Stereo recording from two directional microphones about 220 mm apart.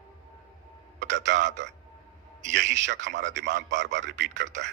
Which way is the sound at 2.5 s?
55° right (ahead or behind).